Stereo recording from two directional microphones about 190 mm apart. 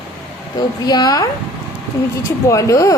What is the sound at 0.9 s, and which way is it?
Speech, 20° left (ahead or behind).